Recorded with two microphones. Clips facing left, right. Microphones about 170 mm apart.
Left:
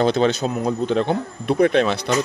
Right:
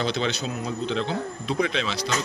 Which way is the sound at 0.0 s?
50° left (ahead or behind).